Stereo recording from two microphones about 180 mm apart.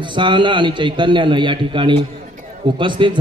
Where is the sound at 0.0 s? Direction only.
25° right (ahead or behind).